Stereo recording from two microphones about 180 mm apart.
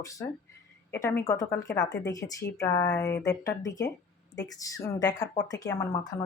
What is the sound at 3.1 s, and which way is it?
Speech, 75° left (ahead or behind).